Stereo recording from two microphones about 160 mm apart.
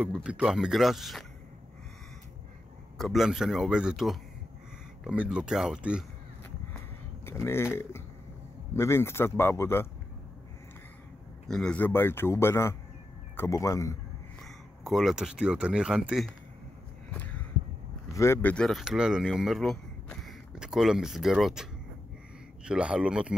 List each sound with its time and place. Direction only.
0.2 s speech: 5° right (ahead or behind)
3.0 s speech: centre (ahead or behind)
7.2 s a man's voice: 15° left (ahead or behind)
11.4 s a man's voice: 5° left (ahead or behind)
14.4 s speech: centre (ahead or behind)
17.1 s a sound: 10° left (ahead or behind)
18.1 s speech: 15° left (ahead or behind); by 21.6 s centre (ahead or behind)
22.7 s speech: 5° right (ahead or behind)